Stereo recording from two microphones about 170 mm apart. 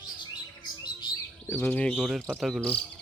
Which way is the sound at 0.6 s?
25° left (ahead or behind).